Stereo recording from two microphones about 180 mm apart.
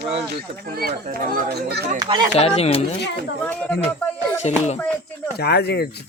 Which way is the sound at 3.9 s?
10° left (ahead or behind).